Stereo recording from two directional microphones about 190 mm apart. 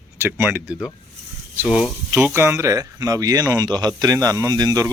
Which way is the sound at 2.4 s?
15° right (ahead or behind).